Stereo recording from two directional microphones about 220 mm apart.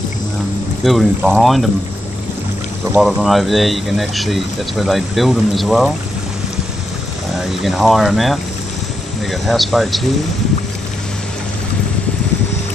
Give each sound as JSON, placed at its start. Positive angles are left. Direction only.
{"t": 0.8, "sound": "speech", "side_deg": 0}
{"t": 3.0, "sound": "speech", "side_deg": 0}
{"t": 7.3, "sound": "speech", "side_deg": 0}